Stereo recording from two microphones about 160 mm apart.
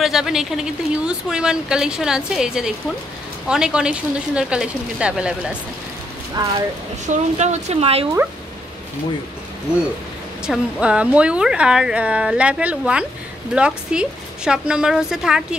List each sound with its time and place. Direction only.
0.0 s a woman's voice: centre (ahead or behind)
6.4 s speech: 25° right (ahead or behind)
7.1 s speech: 45° right (ahead or behind)
10.4 s a woman's voice: 5° right (ahead or behind)